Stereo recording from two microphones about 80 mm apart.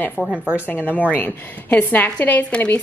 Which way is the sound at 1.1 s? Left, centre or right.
Left.